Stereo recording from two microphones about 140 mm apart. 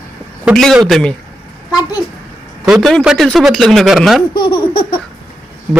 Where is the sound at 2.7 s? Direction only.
Centre (ahead or behind).